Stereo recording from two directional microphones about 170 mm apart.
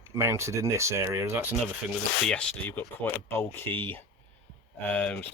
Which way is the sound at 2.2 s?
5° left (ahead or behind).